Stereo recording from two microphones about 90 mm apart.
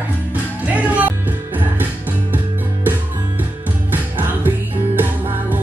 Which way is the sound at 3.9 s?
20° right (ahead or behind).